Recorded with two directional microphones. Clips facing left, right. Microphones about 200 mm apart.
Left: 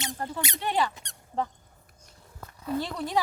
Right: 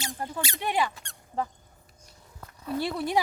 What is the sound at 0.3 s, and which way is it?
Speech, 20° left (ahead or behind).